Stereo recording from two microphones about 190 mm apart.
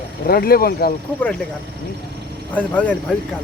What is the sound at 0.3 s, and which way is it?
Speech, 50° left (ahead or behind).